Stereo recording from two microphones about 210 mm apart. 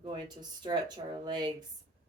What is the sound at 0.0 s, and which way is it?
Speech, 20° right (ahead or behind).